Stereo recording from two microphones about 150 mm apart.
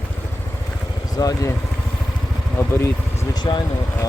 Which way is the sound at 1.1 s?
20° left (ahead or behind).